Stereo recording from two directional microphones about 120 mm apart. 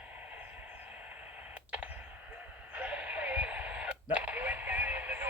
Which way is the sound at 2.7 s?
10° right (ahead or behind).